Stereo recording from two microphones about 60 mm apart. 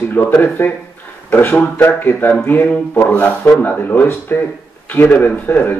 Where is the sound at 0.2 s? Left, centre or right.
Left.